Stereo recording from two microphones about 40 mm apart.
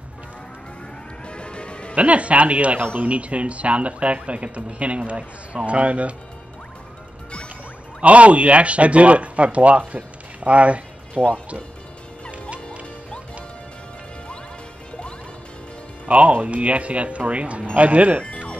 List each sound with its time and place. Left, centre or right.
1.2 s a sound: left
2.0 s speech: right
8.0 s speech: right
16.1 s speech: right